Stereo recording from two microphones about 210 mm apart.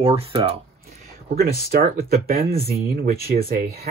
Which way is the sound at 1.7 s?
45° right (ahead or behind).